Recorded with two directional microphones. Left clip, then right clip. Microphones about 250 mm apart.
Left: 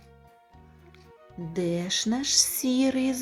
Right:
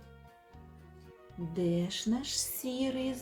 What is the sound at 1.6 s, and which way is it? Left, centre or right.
Speech, left.